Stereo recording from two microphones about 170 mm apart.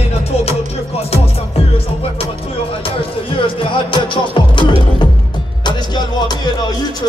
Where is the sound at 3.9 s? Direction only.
30° left (ahead or behind).